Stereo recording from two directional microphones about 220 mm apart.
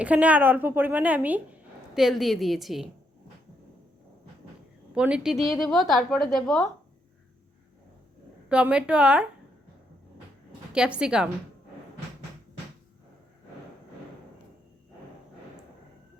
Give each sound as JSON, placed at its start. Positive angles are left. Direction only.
{"t": 0.0, "sound": "a woman's voice", "side_deg": -5}
{"t": 4.9, "sound": "a woman's voice", "side_deg": -5}
{"t": 8.4, "sound": "a woman's voice", "side_deg": -5}
{"t": 10.7, "sound": "a woman's voice", "side_deg": -5}